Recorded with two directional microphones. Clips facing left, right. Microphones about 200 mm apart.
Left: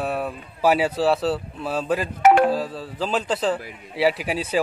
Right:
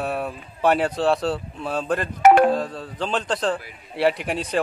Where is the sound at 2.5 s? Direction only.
5° left (ahead or behind).